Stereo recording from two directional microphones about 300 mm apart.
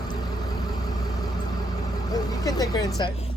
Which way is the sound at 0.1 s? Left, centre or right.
Centre.